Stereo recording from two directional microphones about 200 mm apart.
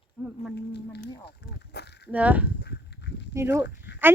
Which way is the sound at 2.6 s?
55° left (ahead or behind).